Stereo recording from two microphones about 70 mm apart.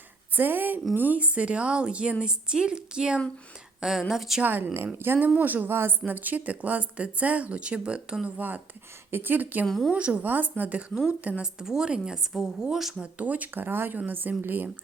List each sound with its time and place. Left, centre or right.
0.3 s a woman's voice: right; by 4.4 s centre
4.4 s speech: right
11.6 s a woman's voice: centre
13.1 s speech: right